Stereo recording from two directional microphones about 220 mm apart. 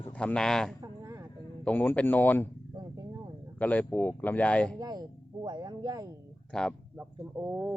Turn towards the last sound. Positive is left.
turn(degrees=-10)  # may be behind; listen again after turning